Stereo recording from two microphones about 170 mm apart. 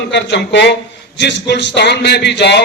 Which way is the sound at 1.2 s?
85° left.